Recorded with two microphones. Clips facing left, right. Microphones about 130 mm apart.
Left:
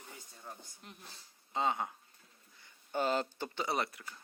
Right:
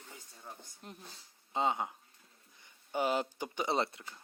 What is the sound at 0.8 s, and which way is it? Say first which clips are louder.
Speech: right 6 dB; 40° right (ahead or behind).